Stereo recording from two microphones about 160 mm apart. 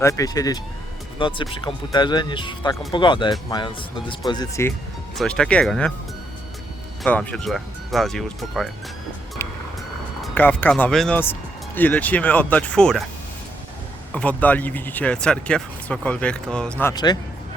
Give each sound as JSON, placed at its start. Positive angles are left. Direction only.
{"t": 0.0, "sound": "speech", "side_deg": 20}
{"t": 1.2, "sound": "speech", "side_deg": 30}
{"t": 5.1, "sound": "speech", "side_deg": 5}
{"t": 7.0, "sound": "speech", "side_deg": 5}
{"t": 10.3, "sound": "speech", "side_deg": 10}
{"t": 14.1, "sound": "speech", "side_deg": 10}
{"t": 16.9, "sound": "speech", "side_deg": 25}